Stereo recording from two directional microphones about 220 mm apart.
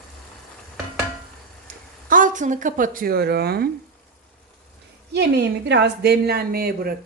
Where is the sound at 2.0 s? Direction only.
35° right (ahead or behind).